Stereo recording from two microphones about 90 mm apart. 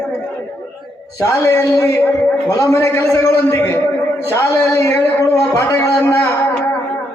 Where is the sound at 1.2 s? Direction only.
35° left (ahead or behind).